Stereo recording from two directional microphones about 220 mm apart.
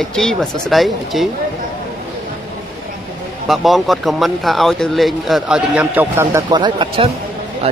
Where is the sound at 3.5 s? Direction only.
Centre (ahead or behind).